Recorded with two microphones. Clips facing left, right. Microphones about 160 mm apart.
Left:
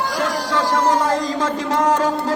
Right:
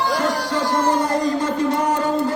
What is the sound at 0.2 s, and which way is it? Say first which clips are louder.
Music: even; 90° left.